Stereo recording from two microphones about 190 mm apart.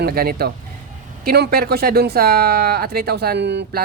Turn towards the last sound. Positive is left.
turn(degrees=-65)  # may be behind; listen again after turning